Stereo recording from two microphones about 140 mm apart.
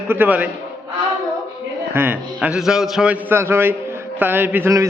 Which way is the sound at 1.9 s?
15° right (ahead or behind).